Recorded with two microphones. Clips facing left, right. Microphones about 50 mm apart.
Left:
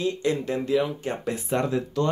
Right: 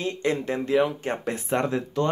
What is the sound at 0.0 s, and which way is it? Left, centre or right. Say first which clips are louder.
Speech: left 1 dB; right.